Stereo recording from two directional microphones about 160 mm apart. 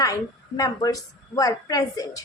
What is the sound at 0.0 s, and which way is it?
A woman's voice, 20° left (ahead or behind).